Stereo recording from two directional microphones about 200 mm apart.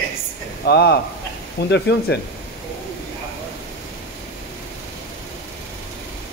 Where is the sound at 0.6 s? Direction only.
55° left (ahead or behind).